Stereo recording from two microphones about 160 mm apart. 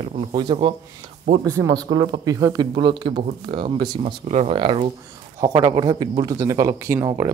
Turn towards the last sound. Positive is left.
turn(degrees=-15)  # may be behind; listen again after turning